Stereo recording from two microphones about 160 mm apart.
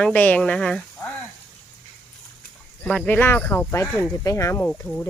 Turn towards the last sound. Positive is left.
turn(degrees=15)  # may be behind; listen again after turning